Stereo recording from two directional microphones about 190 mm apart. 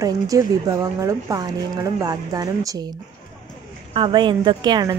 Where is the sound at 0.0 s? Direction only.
20° right (ahead or behind).